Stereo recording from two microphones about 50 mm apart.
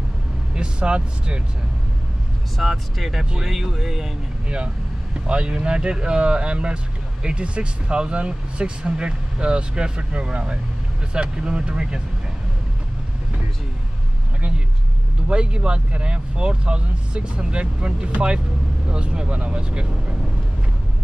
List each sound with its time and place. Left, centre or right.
0.6 s speech: centre
2.5 s speech: centre
5.2 s speech: centre
15.2 s speech: centre